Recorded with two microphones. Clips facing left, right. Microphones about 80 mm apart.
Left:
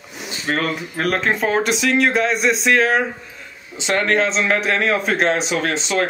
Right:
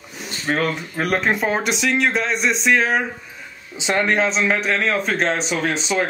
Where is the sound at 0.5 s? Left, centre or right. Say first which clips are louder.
Even; centre.